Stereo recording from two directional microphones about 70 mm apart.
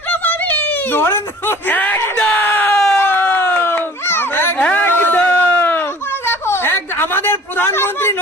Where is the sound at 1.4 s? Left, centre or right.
Left.